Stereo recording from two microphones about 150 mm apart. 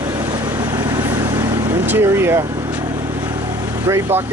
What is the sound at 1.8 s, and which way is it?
Speech, 15° right (ahead or behind).